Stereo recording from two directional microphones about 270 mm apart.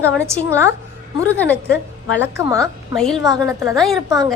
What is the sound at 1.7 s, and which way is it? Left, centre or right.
Speech, left.